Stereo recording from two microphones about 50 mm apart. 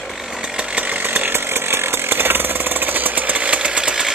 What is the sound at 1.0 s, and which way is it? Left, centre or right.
Chainsaw, right.